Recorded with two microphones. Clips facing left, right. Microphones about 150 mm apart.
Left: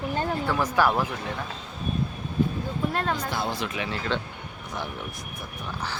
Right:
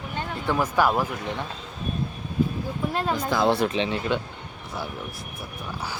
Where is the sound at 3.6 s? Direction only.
25° right (ahead or behind).